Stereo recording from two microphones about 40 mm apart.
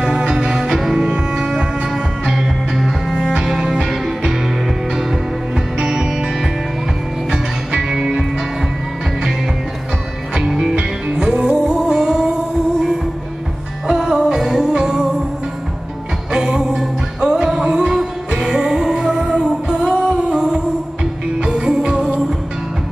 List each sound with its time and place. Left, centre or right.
0.2 s music: centre
0.7 s cello: centre
1.9 s music: centre
5.8 s music: centre
10.6 s music: right
13.8 s music: centre
16.3 s music: centre